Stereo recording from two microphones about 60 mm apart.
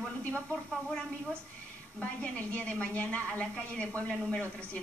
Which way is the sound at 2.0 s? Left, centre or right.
Left.